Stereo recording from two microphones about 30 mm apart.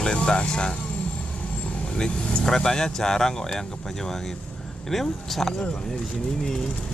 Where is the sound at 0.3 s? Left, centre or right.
Left.